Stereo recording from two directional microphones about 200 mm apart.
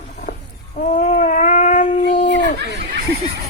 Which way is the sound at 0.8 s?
35° left (ahead or behind).